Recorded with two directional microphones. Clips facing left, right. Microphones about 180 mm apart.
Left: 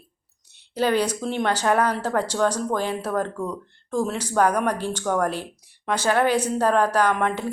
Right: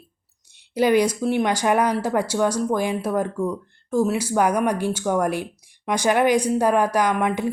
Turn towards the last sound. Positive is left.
turn(degrees=-10)  # may be behind; listen again after turning